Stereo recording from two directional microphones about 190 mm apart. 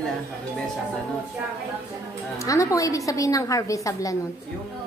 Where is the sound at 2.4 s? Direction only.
15° left (ahead or behind).